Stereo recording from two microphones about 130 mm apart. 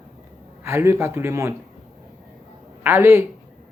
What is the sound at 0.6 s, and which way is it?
Speech, 20° right (ahead or behind).